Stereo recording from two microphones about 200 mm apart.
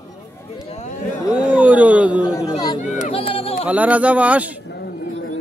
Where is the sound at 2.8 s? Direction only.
35° left (ahead or behind).